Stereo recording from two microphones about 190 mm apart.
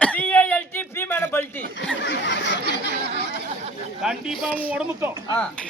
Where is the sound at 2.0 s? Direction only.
70° left (ahead or behind).